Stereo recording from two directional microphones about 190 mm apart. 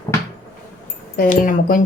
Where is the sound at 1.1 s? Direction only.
45° left (ahead or behind).